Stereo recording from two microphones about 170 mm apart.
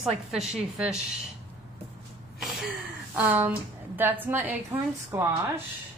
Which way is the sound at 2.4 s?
Centre (ahead or behind).